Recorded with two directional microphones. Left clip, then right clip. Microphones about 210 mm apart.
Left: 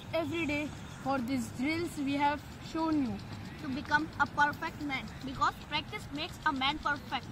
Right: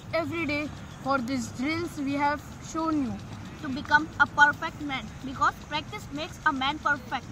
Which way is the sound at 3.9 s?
5° left (ahead or behind).